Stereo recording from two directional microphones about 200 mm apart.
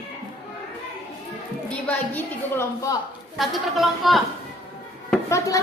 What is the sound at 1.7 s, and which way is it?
A woman's voice, 10° left (ahead or behind).